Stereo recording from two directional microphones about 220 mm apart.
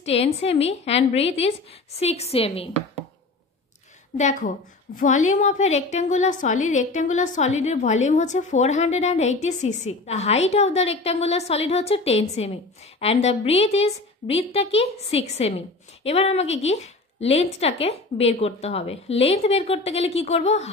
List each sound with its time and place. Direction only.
0.0 s a woman's voice: 25° left (ahead or behind)
4.2 s a woman's voice: 35° left (ahead or behind)